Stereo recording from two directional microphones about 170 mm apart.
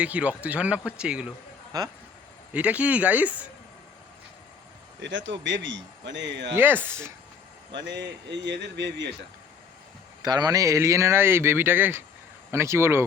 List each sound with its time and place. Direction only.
0.0 s speech: 10° right (ahead or behind)
2.5 s speech: 10° right (ahead or behind)
4.9 s a man's voice: 90° right
6.6 s speech: 10° right (ahead or behind)
7.7 s a man's voice: 90° right
10.2 s speech: 25° right (ahead or behind)